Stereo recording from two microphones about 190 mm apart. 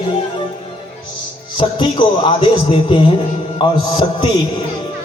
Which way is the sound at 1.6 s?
25° left (ahead or behind).